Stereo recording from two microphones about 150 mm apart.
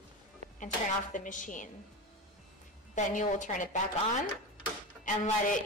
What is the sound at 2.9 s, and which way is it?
Speech, 60° left (ahead or behind).